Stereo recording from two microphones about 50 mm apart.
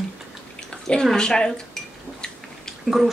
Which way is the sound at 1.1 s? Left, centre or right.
Centre.